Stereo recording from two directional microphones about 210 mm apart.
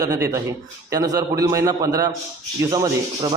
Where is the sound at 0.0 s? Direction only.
15° right (ahead or behind).